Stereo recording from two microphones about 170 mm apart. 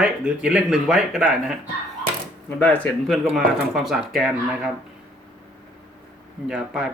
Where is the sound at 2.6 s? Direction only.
10° left (ahead or behind).